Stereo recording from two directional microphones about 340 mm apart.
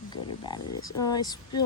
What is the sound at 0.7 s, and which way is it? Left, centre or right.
Speech, left.